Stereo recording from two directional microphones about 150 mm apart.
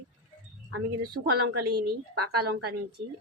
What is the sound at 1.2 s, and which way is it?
Speech, 90° right.